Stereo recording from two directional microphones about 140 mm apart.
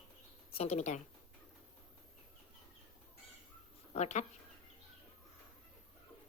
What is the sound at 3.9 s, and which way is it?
Speech, 55° left (ahead or behind).